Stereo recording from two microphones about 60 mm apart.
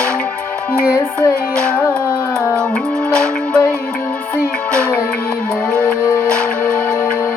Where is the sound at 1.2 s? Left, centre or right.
Centre.